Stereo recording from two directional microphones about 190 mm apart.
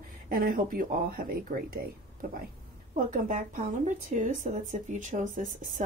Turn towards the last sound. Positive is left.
turn(degrees=-45)  # may be behind; listen again after turning